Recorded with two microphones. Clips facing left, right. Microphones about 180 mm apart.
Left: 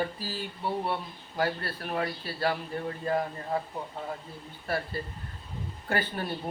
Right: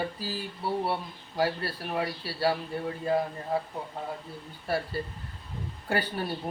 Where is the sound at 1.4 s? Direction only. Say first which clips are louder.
Right 2 dB; 10° right (ahead or behind).